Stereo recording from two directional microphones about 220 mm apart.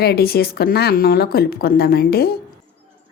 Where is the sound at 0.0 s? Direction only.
45° left (ahead or behind).